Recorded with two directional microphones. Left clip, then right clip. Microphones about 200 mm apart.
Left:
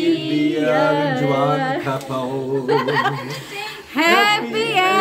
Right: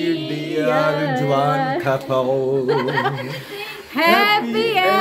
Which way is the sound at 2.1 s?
45° right (ahead or behind).